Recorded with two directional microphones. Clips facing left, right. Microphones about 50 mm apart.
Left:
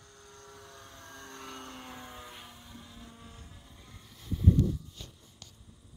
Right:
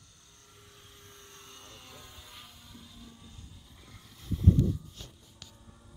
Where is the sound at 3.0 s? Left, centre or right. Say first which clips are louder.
Left 2 dB; left.